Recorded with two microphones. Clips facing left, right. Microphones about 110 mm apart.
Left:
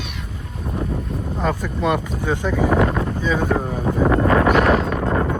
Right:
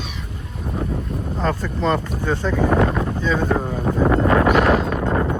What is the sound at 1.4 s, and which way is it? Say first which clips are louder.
Speech: even; 10° left (ahead or behind).